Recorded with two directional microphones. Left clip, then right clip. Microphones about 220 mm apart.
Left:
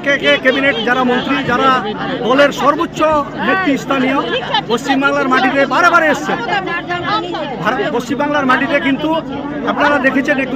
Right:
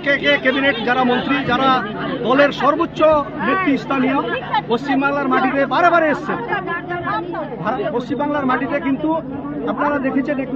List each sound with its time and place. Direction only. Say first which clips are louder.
0.0 s a man's voice: left 4 dB; 10° left (ahead or behind)
4.5 s speech: left 3 dB; 50° left (ahead or behind)
5.0 s a man's voice: left 6 dB; 10° left (ahead or behind)
8.2 s a man's voice: left 7 dB; 10° left (ahead or behind)
9.9 s a man's voice: left 7 dB; 15° left (ahead or behind)